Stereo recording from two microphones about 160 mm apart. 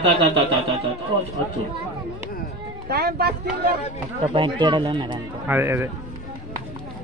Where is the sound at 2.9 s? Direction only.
80° right.